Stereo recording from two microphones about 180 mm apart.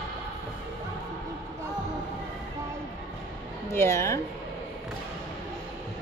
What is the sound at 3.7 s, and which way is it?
Speech, 15° left (ahead or behind).